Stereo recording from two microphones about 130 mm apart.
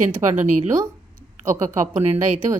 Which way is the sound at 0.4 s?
70° right (ahead or behind).